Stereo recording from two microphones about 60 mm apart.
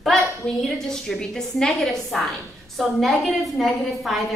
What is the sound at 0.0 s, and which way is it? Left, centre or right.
A woman's voice, centre.